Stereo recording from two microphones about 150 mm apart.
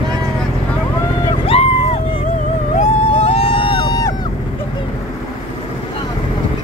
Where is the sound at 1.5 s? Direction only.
45° left (ahead or behind).